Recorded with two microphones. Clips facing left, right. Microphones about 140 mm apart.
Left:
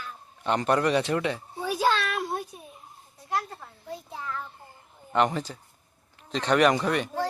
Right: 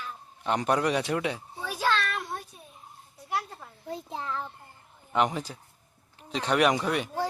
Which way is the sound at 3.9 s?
25° right (ahead or behind).